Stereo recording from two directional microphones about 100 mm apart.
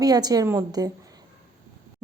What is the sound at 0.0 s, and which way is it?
Speech, 40° right (ahead or behind).